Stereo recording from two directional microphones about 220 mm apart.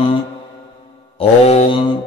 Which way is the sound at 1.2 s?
30° left (ahead or behind).